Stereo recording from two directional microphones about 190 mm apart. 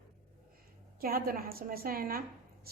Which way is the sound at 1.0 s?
50° right (ahead or behind).